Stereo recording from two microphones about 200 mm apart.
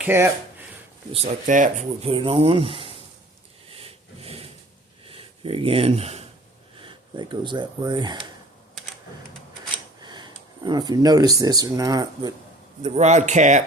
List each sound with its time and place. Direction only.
0.0 s speech: 10° right (ahead or behind)
1.1 s speech: 35° right (ahead or behind)
3.7 s a sound: 30° right (ahead or behind)
5.0 s speech: 25° right (ahead or behind)
10.0 s speech: 20° right (ahead or behind)
12.8 s speech: 35° right (ahead or behind)